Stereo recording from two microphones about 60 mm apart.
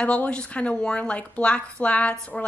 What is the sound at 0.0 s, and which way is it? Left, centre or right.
A woman's voice, left.